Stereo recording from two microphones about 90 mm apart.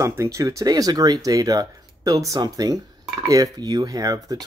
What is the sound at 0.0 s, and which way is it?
Speech, 35° right (ahead or behind).